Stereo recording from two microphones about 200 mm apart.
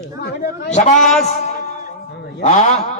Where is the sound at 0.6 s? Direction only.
35° left (ahead or behind).